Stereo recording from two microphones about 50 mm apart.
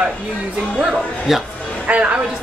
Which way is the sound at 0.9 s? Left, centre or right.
Centre.